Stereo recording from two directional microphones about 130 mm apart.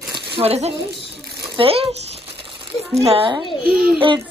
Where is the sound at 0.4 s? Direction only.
55° right (ahead or behind).